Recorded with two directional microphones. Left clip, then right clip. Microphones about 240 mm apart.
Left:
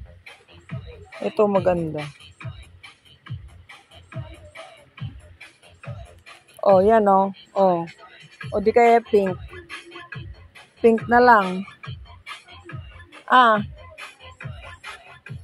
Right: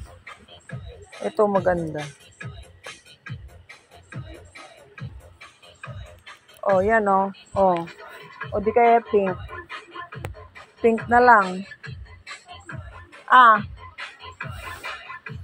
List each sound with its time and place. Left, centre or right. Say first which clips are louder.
1.2 s speech: left 1 dB; centre
6.6 s speech: left 4 dB; left
10.8 s speech: left 2 dB; left
13.2 s speech: right 2 dB; left